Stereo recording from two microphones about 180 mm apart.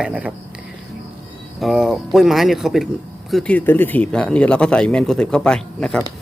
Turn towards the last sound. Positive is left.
turn(degrees=5)  # may be behind; listen again after turning